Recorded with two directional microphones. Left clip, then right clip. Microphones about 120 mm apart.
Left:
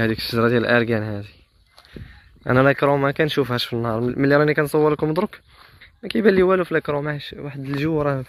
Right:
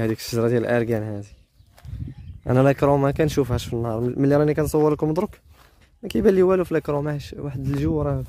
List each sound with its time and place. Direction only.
0.0 s speech: 25° right (ahead or behind)
2.4 s speech: 35° right (ahead or behind)
2.7 s speech: 50° right (ahead or behind)
3.4 s speech: 25° right (ahead or behind)
4.1 s speech: 40° right (ahead or behind)
5.1 s speech: 30° right (ahead or behind)
5.8 s speech: 50° right (ahead or behind)
7.1 s speech: 65° right (ahead or behind)
7.9 s speech: 10° right (ahead or behind)